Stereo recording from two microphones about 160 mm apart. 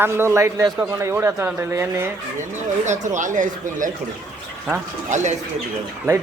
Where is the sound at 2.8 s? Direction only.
50° right (ahead or behind).